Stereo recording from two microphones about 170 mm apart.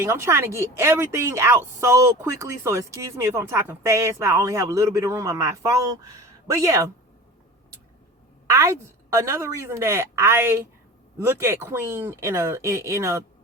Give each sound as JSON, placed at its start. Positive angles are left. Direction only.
{"t": 0.0, "sound": "speech", "side_deg": -15}
{"t": 8.4, "sound": "speech", "side_deg": -15}